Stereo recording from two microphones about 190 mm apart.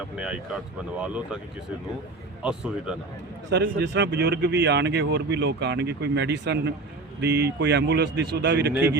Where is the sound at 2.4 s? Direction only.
5° right (ahead or behind).